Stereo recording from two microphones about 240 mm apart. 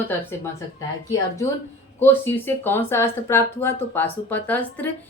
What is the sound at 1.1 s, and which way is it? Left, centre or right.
A woman's voice, centre.